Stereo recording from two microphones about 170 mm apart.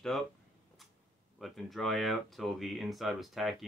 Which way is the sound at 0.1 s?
Centre (ahead or behind).